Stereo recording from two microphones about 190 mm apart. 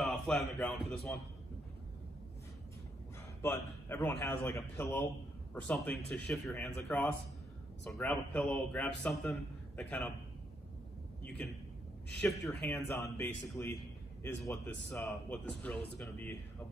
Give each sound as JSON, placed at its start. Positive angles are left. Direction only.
{"t": 0.0, "sound": "a man's voice", "side_deg": 0}
{"t": 3.4, "sound": "a man's voice", "side_deg": 10}
{"t": 12.4, "sound": "speech", "side_deg": 5}
{"t": 12.9, "sound": "a man's voice", "side_deg": 15}
{"t": 15.0, "sound": "a man's voice", "side_deg": 5}